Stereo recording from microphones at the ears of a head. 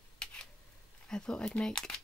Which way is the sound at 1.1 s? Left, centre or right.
Centre.